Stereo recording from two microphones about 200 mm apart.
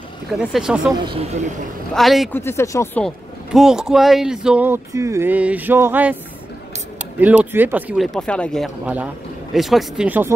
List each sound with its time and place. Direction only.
0.3 s speech: centre (ahead or behind)
1.0 s speech: 30° right (ahead or behind)
2.0 s speech: centre (ahead or behind)
2.3 s speech: 15° left (ahead or behind)
3.5 s speech: 5° right (ahead or behind)
7.2 s speech: 10° right (ahead or behind)